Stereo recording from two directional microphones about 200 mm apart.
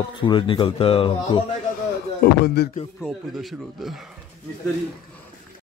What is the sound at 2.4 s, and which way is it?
Music, 55° left (ahead or behind).